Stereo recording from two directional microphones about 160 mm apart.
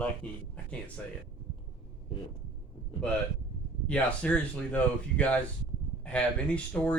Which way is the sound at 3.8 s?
5° left (ahead or behind).